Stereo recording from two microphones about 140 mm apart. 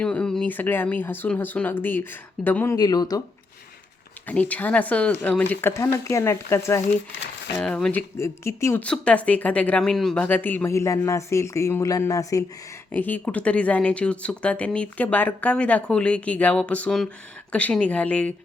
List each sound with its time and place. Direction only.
0.0 s speech: 5° left (ahead or behind)
2.7 s speech: 30° left (ahead or behind)
4.3 s speech: 10° left (ahead or behind)
7.5 s speech: 10° left (ahead or behind)
8.2 s speech: 20° left (ahead or behind)
8.8 s speech: 10° left (ahead or behind)
12.9 s speech: 10° left (ahead or behind)